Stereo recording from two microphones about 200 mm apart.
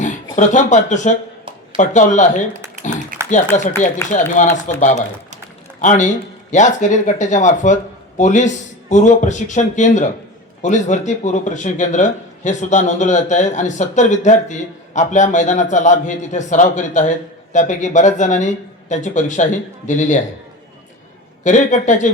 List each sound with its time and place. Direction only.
0.3 s speech: 40° left (ahead or behind)
3.1 s a sound: 40° right (ahead or behind)
3.5 s speech: 35° left (ahead or behind)
4.8 s speech: 40° left (ahead or behind)
21.4 s speech: 40° left (ahead or behind)